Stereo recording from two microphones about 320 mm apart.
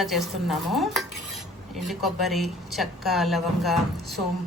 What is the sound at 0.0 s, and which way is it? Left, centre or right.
Speech, centre.